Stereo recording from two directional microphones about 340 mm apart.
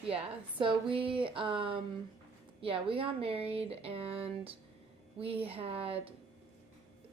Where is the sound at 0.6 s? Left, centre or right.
Centre.